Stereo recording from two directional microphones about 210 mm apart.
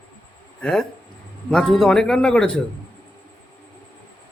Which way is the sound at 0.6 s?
5° left (ahead or behind).